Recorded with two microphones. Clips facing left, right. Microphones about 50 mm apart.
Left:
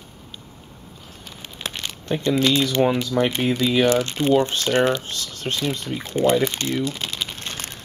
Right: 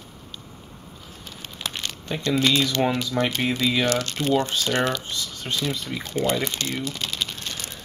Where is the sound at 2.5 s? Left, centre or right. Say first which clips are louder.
Left 3 dB; centre.